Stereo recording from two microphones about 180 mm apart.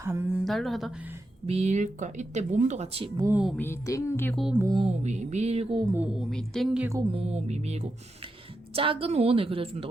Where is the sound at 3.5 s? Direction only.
15° left (ahead or behind).